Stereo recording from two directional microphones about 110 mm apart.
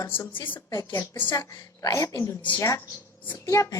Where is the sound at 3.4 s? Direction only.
30° left (ahead or behind).